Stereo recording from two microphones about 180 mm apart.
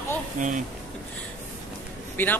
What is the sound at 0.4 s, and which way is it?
Speech, 45° right (ahead or behind).